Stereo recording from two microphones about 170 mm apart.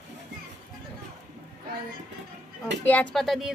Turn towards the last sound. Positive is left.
turn(degrees=0)  # may be behind; listen again after turning